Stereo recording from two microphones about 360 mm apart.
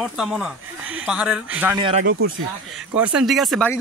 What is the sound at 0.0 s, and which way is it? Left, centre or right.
Speech, centre.